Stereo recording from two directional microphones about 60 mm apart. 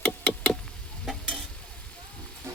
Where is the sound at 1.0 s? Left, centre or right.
Centre.